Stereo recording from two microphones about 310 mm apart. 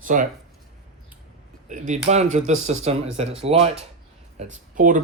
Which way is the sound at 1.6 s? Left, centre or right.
Right.